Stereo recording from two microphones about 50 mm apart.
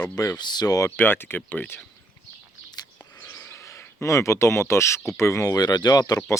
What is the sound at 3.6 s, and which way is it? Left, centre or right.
Speech, left.